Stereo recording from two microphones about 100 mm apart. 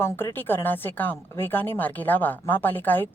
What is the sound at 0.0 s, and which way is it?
A woman's voice, 25° left (ahead or behind).